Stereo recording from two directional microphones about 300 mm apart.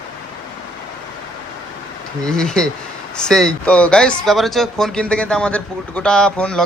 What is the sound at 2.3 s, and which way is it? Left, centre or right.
Speech, centre.